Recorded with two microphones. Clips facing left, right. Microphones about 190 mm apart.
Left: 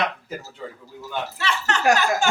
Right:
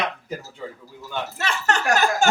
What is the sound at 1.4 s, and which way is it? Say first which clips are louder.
Speech: right 1 dB; 45° right (ahead or behind).